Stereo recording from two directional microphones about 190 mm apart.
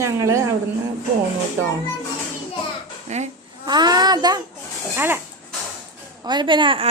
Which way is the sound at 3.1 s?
35° right (ahead or behind).